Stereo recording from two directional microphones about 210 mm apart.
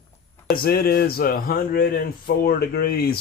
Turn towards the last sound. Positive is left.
turn(degrees=45)  # may be behind; listen again after turning